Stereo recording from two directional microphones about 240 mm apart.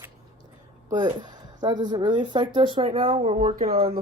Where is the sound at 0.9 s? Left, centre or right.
Centre.